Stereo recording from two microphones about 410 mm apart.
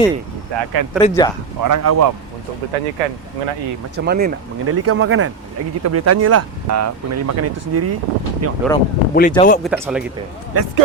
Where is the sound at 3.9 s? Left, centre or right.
Right.